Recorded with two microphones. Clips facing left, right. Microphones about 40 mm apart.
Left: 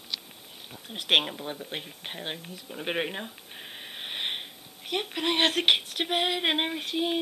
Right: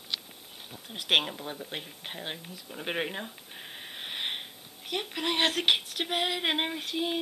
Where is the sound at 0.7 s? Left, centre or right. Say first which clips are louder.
Left 2 dB; centre.